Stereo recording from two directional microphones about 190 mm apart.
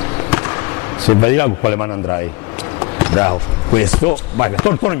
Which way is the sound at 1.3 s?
15° left (ahead or behind).